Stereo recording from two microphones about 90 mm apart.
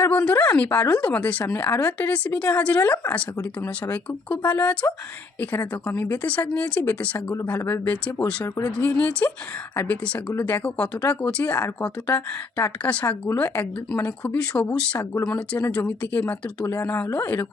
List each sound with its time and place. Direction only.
0.0 s speech: 15° left (ahead or behind)